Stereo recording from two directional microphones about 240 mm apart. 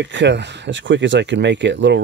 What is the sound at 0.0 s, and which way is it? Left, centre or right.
Speech, right.